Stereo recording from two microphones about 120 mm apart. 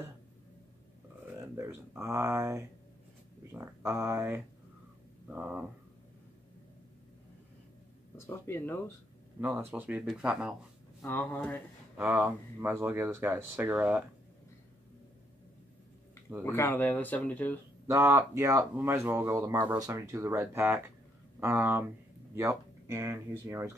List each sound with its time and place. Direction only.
1.2 s speech: 20° right (ahead or behind)
8.5 s speech: 20° left (ahead or behind)
9.7 s speech: 10° right (ahead or behind)
11.1 s speech: 15° left (ahead or behind)
12.1 s speech: 15° right (ahead or behind)
16.4 s speech: 20° left (ahead or behind)
17.8 s speech: 30° right (ahead or behind)